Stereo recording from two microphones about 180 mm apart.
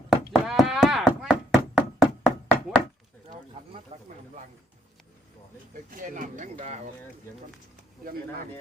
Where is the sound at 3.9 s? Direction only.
35° right (ahead or behind).